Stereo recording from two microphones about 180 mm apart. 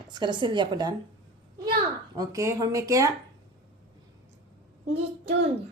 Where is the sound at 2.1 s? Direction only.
15° right (ahead or behind).